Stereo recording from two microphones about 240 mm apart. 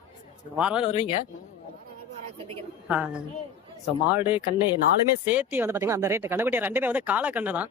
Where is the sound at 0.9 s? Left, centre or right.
Left.